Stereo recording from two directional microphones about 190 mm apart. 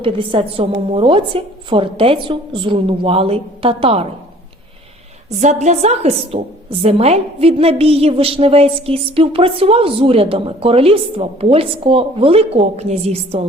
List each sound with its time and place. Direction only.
0.0 s a woman's voice: 25° right (ahead or behind)
5.3 s a woman's voice: 40° right (ahead or behind)